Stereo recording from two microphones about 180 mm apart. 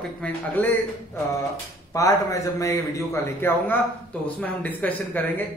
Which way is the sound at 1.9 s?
20° left (ahead or behind).